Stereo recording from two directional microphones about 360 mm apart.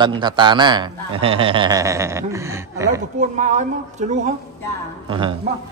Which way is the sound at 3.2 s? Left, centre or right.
Centre.